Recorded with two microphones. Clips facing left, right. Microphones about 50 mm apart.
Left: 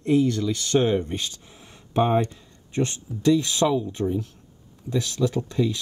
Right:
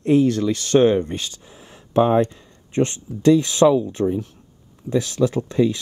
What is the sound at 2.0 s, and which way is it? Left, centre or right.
Speech, right.